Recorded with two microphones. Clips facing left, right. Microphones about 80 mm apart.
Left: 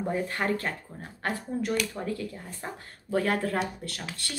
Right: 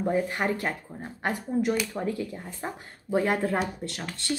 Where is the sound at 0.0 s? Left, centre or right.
Centre.